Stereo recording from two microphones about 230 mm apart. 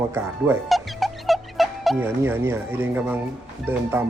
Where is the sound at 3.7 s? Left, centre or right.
Centre.